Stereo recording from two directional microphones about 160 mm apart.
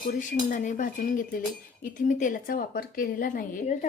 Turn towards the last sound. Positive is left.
turn(degrees=50)  # may be behind; listen again after turning